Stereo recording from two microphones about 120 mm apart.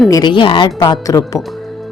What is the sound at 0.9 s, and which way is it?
Speech, 30° left (ahead or behind).